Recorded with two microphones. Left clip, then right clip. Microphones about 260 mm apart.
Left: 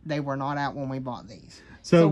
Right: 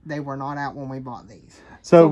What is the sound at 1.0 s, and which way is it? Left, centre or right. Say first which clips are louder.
Speech: even; centre.